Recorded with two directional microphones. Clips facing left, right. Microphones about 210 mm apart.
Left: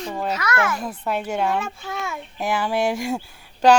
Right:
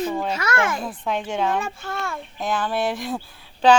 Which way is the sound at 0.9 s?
10° left (ahead or behind).